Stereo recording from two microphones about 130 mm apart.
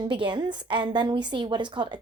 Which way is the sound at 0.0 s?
40° right (ahead or behind).